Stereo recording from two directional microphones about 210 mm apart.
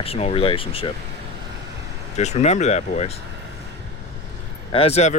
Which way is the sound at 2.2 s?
30° left (ahead or behind).